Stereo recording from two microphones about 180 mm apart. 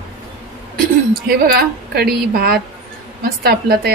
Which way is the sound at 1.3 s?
60° right (ahead or behind).